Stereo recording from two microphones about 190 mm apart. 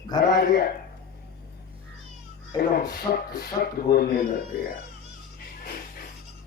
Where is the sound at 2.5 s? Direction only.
20° left (ahead or behind).